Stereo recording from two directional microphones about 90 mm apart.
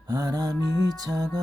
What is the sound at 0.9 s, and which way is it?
Music, 45° right (ahead or behind).